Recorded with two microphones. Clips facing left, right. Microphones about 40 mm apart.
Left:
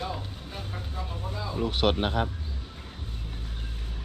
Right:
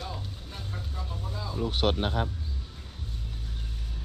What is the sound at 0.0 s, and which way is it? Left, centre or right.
Vehicle, left.